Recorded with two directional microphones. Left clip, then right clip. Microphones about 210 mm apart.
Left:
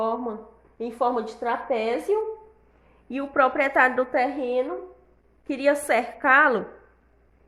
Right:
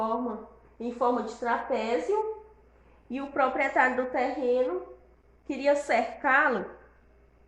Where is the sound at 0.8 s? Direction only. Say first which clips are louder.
Left 3 dB; 50° left (ahead or behind).